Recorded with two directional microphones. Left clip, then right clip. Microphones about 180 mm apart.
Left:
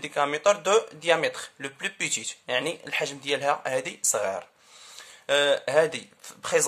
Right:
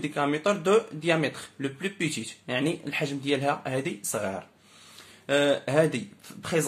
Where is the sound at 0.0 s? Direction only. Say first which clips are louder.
Left 3 dB; 30° left (ahead or behind).